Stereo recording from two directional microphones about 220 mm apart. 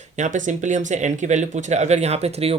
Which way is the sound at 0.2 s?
35° right (ahead or behind).